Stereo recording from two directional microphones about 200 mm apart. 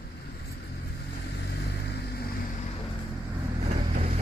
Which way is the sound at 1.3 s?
55° left (ahead or behind).